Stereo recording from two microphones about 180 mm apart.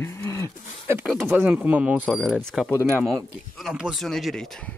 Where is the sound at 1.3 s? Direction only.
10° right (ahead or behind).